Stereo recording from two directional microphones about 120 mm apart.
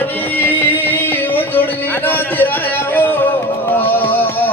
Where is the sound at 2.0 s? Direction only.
15° left (ahead or behind).